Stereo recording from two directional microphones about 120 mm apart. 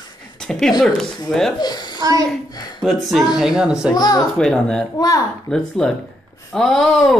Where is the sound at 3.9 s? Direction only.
35° left (ahead or behind).